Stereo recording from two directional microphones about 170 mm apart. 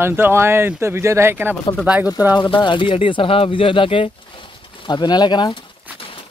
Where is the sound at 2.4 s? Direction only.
25° left (ahead or behind).